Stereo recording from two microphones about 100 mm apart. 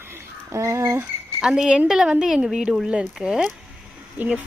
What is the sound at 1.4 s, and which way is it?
Speech, 5° right (ahead or behind).